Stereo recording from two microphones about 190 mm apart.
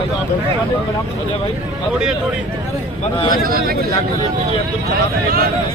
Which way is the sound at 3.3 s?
50° right (ahead or behind).